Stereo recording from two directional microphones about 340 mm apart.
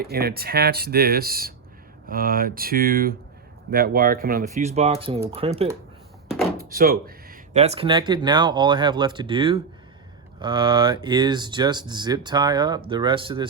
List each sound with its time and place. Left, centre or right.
0.0 s speech: right